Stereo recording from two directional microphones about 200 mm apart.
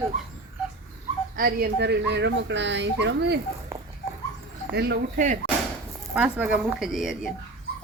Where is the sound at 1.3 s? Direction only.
50° right (ahead or behind).